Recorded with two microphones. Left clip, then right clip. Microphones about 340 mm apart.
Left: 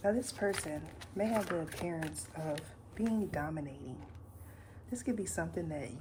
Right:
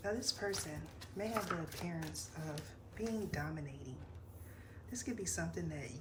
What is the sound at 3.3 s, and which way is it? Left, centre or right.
Speech, centre.